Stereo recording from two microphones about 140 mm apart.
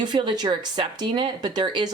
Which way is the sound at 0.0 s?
35° right (ahead or behind).